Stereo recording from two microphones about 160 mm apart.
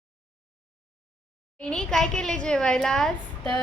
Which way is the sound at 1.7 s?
5° left (ahead or behind).